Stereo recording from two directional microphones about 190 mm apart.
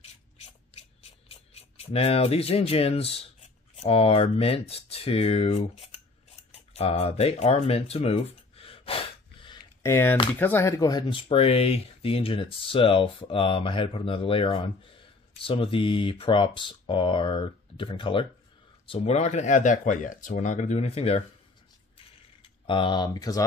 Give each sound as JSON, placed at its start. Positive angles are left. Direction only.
{"t": 1.0, "sound": "speech", "side_deg": 30}
{"t": 6.5, "sound": "a sound", "side_deg": 30}
{"t": 9.8, "sound": "speech", "side_deg": 15}
{"t": 22.7, "sound": "speech", "side_deg": 25}